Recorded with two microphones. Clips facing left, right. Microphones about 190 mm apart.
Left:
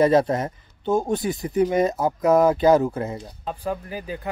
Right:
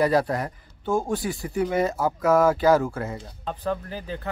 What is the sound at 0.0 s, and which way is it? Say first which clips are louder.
Speech: left 4 dB; 20° left (ahead or behind).